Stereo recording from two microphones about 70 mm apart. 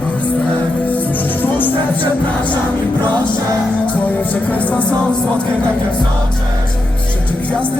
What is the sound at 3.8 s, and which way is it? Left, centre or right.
Music, left.